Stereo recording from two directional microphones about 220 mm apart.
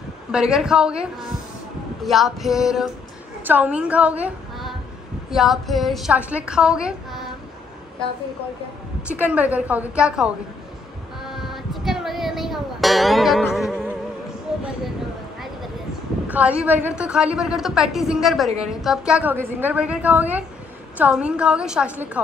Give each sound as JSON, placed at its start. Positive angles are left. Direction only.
{"t": 0.3, "sound": "a woman's voice", "side_deg": -5}
{"t": 9.0, "sound": "a woman's voice", "side_deg": -5}
{"t": 11.1, "sound": "music", "side_deg": 0}
{"t": 14.5, "sound": "a sound", "side_deg": -5}
{"t": 16.3, "sound": "a woman's voice", "side_deg": -5}